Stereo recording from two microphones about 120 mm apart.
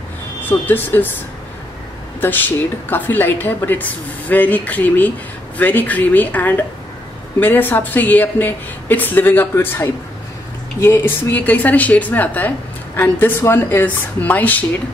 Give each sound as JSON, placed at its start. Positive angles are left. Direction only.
{"t": 0.5, "sound": "a woman's voice", "side_deg": 15}
{"t": 2.1, "sound": "a woman's voice", "side_deg": 15}